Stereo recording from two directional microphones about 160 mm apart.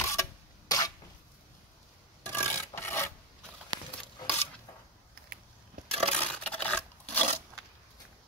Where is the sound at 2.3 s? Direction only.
15° left (ahead or behind).